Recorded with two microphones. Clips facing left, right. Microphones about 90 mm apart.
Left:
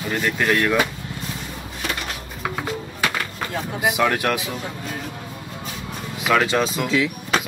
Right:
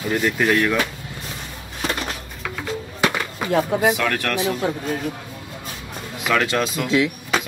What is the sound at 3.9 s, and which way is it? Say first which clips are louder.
Speech: left 3 dB; 15° left (ahead or behind).